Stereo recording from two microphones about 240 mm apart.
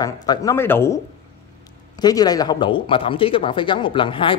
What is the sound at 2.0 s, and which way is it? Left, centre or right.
Speech, centre.